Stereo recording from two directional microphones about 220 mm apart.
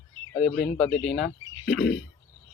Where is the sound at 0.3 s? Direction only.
45° left (ahead or behind).